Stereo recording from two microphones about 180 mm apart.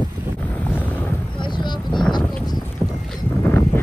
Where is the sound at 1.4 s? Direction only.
25° left (ahead or behind).